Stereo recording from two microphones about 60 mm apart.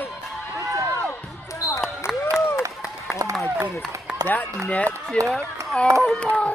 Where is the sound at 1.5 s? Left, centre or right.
Left.